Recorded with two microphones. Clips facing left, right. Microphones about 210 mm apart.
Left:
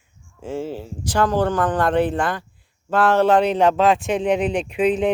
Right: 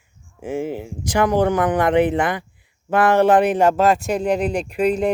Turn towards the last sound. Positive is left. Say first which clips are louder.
# even
turn(degrees=5)  # may be behind; listen again after turning